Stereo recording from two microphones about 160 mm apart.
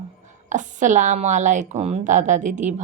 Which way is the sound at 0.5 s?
50° right (ahead or behind).